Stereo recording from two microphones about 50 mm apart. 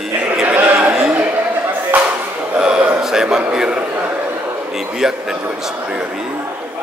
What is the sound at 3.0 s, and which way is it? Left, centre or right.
Speech, centre.